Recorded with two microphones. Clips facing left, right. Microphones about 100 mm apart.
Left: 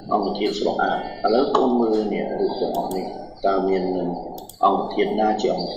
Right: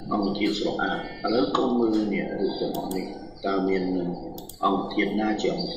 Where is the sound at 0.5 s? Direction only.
65° left (ahead or behind).